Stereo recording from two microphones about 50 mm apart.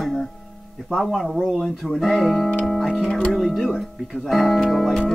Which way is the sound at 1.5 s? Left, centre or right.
Centre.